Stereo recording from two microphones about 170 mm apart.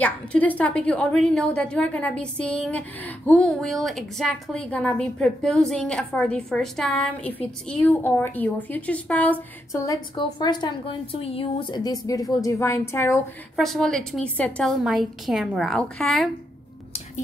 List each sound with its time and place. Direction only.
0.0 s a woman's voice: 10° left (ahead or behind)
13.6 s a woman's voice: centre (ahead or behind)